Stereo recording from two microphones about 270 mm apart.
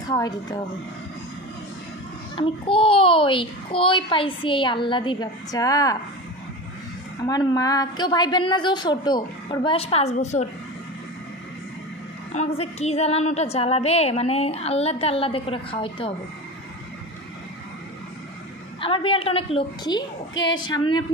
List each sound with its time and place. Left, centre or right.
0.1 s a woman's voice: centre
2.3 s a woman's voice: centre
7.2 s a woman's voice: centre
12.4 s a woman's voice: left
18.8 s a woman's voice: centre
20.3 s a woman's voice: left
20.6 s a woman's voice: centre